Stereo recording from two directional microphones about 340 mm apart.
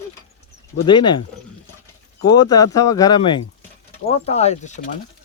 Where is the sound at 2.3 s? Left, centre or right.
Centre.